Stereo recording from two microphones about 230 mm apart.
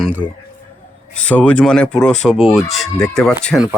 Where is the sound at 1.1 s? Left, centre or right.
Centre.